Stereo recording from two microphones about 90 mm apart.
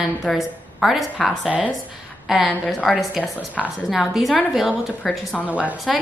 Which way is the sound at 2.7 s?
10° left (ahead or behind).